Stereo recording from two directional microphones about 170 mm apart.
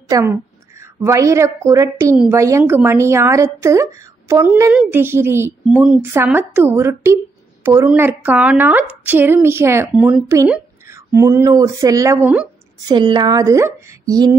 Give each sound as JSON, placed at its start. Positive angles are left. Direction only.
{"t": 0.1, "sound": "a woman's voice", "side_deg": -15}